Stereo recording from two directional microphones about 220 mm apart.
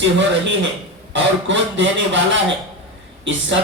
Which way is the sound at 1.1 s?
55° right (ahead or behind).